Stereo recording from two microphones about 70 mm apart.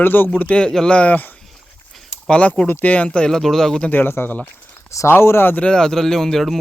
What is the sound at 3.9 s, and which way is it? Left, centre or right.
Speech, left.